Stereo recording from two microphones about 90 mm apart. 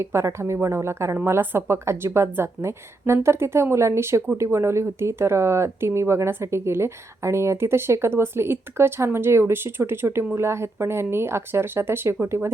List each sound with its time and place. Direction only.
0.0 s speech: 30° right (ahead or behind)